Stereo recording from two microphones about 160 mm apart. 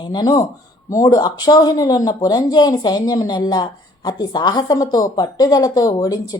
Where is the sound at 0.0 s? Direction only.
25° left (ahead or behind).